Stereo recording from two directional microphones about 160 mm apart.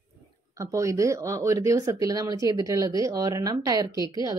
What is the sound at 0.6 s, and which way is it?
Speech, 20° right (ahead or behind).